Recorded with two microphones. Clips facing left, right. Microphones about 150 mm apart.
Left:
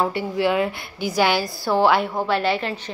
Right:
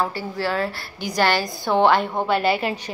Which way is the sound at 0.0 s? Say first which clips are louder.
Left 4 dB; 15° left (ahead or behind).